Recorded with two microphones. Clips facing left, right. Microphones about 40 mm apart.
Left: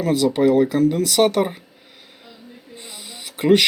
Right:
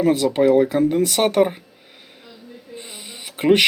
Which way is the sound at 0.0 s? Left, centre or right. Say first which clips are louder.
Right 1 dB; centre.